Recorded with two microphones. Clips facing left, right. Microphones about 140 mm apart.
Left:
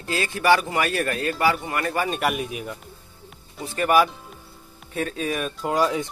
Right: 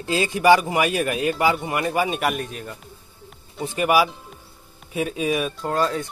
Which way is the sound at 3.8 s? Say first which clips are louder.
Even; 10° right (ahead or behind).